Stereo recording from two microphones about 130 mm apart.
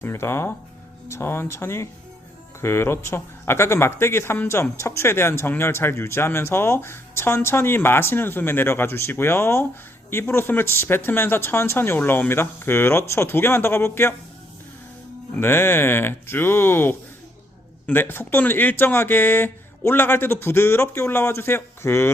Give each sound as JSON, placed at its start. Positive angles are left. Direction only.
{"t": 0.0, "sound": "speech", "side_deg": 20}
{"t": 15.4, "sound": "speech", "side_deg": 15}